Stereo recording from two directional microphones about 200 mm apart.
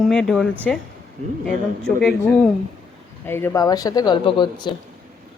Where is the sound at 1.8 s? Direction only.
5° left (ahead or behind); by 4.7 s 25° left (ahead or behind).